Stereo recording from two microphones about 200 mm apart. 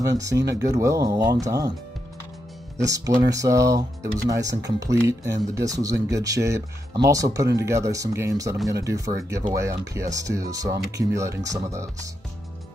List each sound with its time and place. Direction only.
0.0 s speech: 15° right (ahead or behind)
2.8 s speech: 15° right (ahead or behind)